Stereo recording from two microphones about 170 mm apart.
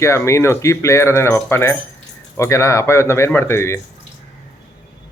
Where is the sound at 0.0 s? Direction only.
15° left (ahead or behind).